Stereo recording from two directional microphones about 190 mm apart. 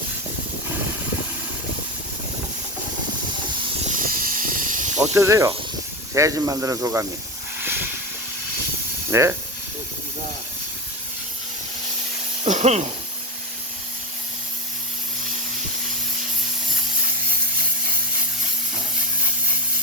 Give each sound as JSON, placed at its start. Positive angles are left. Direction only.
{"t": 3.9, "sound": "snake", "side_deg": -50}
{"t": 5.1, "sound": "speech", "side_deg": -15}
{"t": 7.6, "sound": "hiss", "side_deg": -10}
{"t": 9.0, "sound": "speech", "side_deg": -15}
{"t": 12.5, "sound": "speech", "side_deg": -40}